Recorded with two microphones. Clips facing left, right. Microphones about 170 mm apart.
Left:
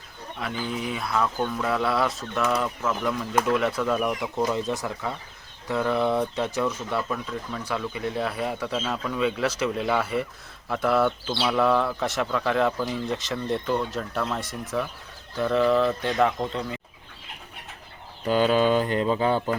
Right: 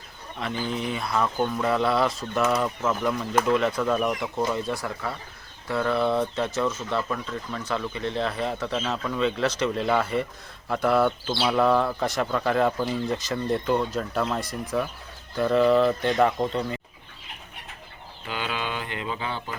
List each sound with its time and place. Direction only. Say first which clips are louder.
0.3 s speech: right 1 dB; 5° left (ahead or behind)
4.5 s speech: left 1 dB; 20° left (ahead or behind); by 16.8 s centre (ahead or behind)
18.3 s mantra: left 11 dB; 40° left (ahead or behind)